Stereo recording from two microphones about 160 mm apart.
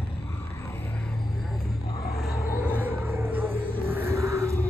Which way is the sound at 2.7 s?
10° right (ahead or behind).